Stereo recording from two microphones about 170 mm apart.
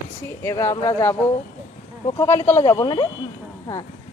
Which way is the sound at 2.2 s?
15° left (ahead or behind).